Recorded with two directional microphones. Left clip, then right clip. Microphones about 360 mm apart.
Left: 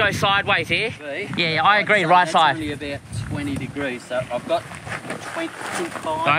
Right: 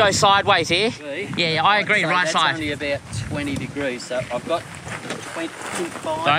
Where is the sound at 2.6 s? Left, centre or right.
Centre.